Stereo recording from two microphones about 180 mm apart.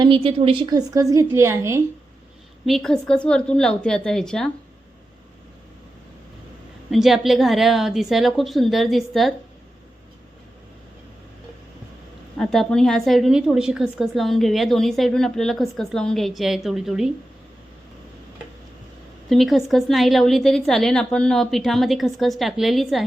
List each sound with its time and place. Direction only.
0.0 s a woman's voice: 30° right (ahead or behind)
2.6 s a woman's voice: centre (ahead or behind)
6.9 s a woman's voice: centre (ahead or behind)
12.4 s a woman's voice: centre (ahead or behind)
19.3 s a woman's voice: centre (ahead or behind)